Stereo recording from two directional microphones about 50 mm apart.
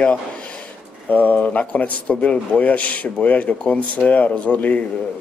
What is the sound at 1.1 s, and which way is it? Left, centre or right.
Speech, left.